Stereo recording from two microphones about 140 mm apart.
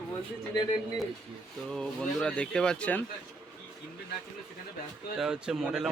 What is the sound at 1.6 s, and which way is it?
Speech, 5° left (ahead or behind).